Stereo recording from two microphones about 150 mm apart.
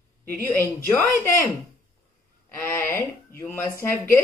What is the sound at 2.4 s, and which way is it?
Speech, 15° left (ahead or behind).